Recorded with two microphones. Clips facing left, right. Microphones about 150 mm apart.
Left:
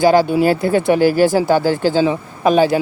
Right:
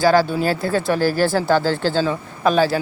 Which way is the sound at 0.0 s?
15° left (ahead or behind).